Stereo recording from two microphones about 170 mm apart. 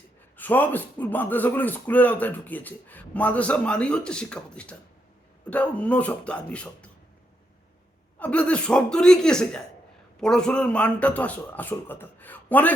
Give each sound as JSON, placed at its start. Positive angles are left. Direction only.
{"t": 0.3, "sound": "speech", "side_deg": 10}
{"t": 8.2, "sound": "speech", "side_deg": 5}